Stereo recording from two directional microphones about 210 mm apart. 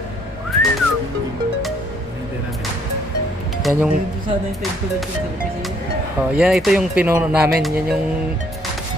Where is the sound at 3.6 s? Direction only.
5° right (ahead or behind).